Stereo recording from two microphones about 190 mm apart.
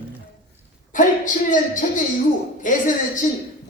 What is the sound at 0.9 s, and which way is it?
A woman's voice, 45° left (ahead or behind).